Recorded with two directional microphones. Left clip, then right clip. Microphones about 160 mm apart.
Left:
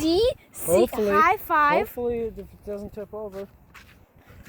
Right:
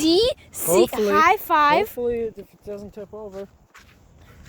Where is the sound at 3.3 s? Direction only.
80° left.